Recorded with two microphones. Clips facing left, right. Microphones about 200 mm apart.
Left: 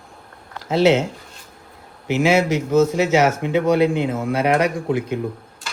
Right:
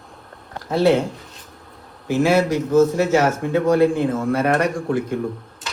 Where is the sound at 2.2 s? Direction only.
20° left (ahead or behind).